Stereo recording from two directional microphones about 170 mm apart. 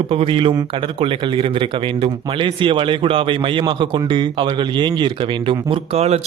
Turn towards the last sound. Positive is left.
turn(degrees=-35)  # may be behind; listen again after turning